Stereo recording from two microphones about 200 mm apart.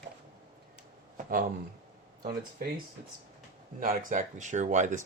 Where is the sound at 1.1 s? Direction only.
45° right (ahead or behind).